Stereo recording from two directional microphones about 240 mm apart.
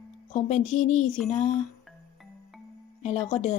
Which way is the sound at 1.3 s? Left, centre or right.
Left.